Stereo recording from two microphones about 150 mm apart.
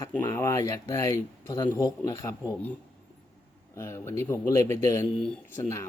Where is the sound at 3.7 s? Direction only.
15° left (ahead or behind).